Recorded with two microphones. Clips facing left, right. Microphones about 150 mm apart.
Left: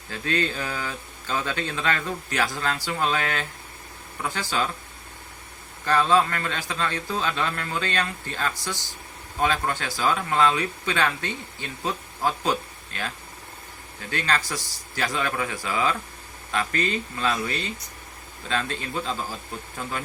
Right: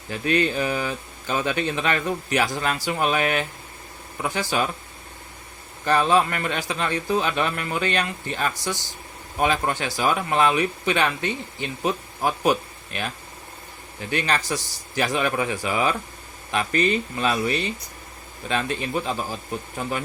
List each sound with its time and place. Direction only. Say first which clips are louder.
0.1 s speech: right 5 dB; 15° right (ahead or behind)
5.8 s speech: right 1 dB; 15° right (ahead or behind)
14.1 s speech: right 3 dB; 15° right (ahead or behind)